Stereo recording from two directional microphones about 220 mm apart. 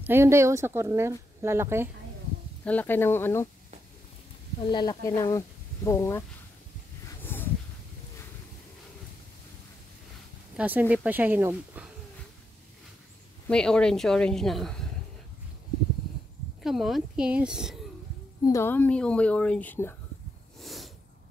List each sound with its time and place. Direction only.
0.0 s speech: 10° right (ahead or behind)
2.6 s speech: 5° left (ahead or behind)
4.6 s speech: 20° left (ahead or behind)
7.1 s a sound: 10° left (ahead or behind)
10.5 s speech: 5° right (ahead or behind)
13.5 s speech: 5° left (ahead or behind)
16.6 s speech: centre (ahead or behind)
18.4 s speech: 15° left (ahead or behind)
20.6 s snort: centre (ahead or behind)